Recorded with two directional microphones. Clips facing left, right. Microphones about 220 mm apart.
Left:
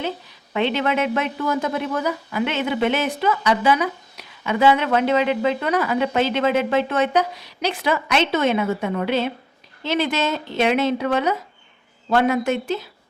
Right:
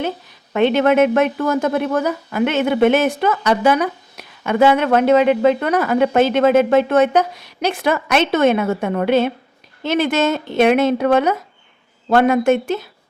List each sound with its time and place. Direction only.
0.5 s a woman's voice: 50° right (ahead or behind)